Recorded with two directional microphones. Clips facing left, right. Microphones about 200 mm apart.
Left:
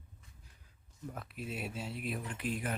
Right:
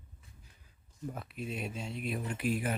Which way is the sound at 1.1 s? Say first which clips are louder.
Right 3 dB; centre (ahead or behind).